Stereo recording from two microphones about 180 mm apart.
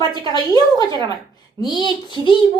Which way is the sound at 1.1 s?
25° left (ahead or behind).